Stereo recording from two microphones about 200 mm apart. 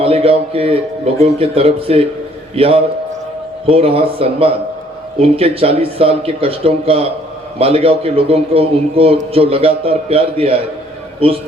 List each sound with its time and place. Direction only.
0.0 s a man's voice: 30° right (ahead or behind)